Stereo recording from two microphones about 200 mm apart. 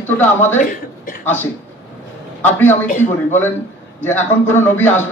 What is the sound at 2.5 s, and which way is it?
Speech, 10° left (ahead or behind).